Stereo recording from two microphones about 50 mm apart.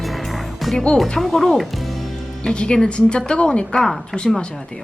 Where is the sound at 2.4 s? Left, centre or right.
Centre.